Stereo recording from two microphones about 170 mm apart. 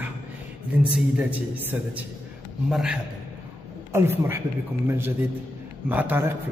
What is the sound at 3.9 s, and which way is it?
A man's voice, 15° right (ahead or behind).